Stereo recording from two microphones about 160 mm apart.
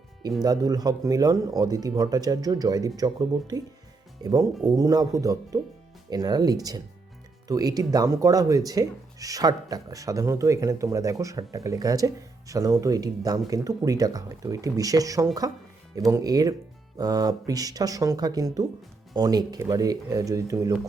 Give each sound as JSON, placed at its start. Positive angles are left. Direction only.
{"t": 0.4, "sound": "speech", "side_deg": -25}